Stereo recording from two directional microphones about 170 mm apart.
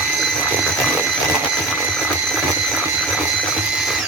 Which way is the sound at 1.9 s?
Centre (ahead or behind).